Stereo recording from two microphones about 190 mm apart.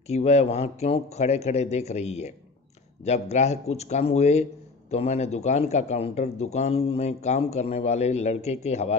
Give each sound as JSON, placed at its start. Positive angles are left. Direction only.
{"t": 0.1, "sound": "a man's voice", "side_deg": 35}